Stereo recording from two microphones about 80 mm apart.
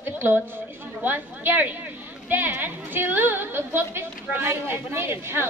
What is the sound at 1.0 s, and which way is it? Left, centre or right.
A woman's voice, right.